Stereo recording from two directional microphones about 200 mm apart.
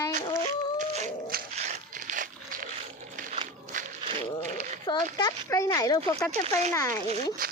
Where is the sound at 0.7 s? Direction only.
35° right (ahead or behind).